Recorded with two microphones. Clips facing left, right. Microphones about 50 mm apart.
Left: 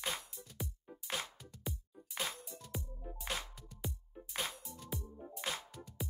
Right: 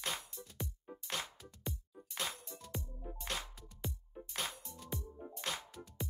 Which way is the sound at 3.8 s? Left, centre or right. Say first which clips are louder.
Right 1 dB; centre.